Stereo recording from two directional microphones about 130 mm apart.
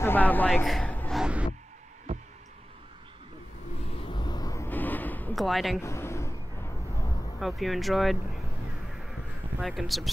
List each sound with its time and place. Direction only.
0.0 s a man's voice: 15° left (ahead or behind)
0.8 s a sound: 10° left (ahead or behind)
1.1 s a sound: 5° right (ahead or behind)
3.9 s vehicle: 40° left (ahead or behind)
4.6 s a sound: 15° left (ahead or behind)
5.3 s speech: centre (ahead or behind)
5.8 s vehicle: 20° left (ahead or behind)
7.3 s speech: centre (ahead or behind)
9.6 s speech: centre (ahead or behind)